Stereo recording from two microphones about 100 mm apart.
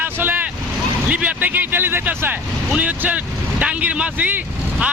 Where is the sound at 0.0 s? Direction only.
20° right (ahead or behind).